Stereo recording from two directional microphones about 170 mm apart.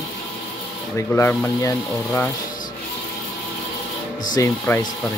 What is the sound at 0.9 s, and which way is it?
Speech, 15° left (ahead or behind).